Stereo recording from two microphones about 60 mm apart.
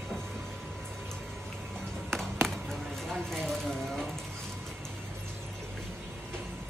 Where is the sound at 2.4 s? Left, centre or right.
Centre.